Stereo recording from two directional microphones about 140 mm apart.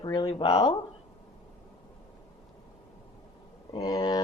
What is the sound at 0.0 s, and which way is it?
Speech, 35° left (ahead or behind).